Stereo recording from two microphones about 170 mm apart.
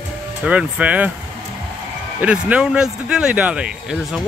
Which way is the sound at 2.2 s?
5° right (ahead or behind).